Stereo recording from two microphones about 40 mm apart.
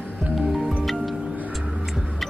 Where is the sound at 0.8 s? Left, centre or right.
Centre.